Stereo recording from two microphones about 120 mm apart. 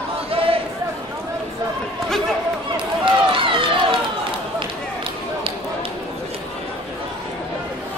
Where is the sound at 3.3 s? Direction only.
45° right (ahead or behind).